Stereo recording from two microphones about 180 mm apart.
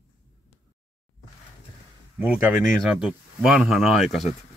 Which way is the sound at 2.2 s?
5° right (ahead or behind).